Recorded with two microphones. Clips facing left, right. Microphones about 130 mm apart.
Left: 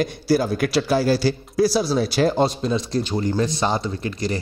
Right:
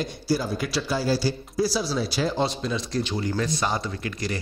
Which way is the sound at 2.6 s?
35° left (ahead or behind).